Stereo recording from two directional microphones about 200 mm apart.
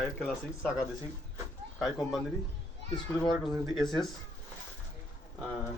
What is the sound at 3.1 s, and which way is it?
Speech, 20° left (ahead or behind).